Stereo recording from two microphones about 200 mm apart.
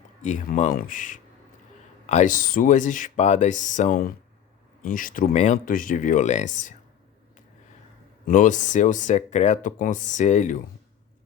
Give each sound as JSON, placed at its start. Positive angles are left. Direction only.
{"t": 0.2, "sound": "speech", "side_deg": 40}
{"t": 8.3, "sound": "speech", "side_deg": 40}